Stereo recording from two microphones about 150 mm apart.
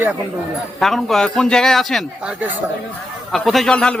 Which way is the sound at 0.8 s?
Centre (ahead or behind).